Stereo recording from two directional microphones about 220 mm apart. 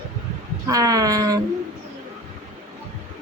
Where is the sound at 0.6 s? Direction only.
15° right (ahead or behind).